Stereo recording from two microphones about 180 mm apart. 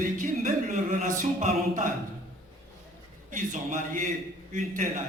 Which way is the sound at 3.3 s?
45° right (ahead or behind).